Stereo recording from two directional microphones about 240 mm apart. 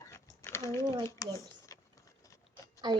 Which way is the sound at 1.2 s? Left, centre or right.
Centre.